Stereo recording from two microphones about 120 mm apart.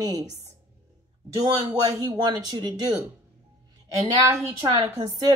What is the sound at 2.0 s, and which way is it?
Speech, 35° right (ahead or behind).